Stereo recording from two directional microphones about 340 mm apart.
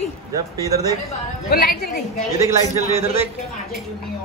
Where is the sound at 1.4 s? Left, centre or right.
Left.